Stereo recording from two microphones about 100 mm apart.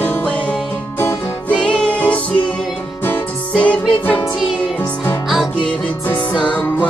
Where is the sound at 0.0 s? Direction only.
15° left (ahead or behind).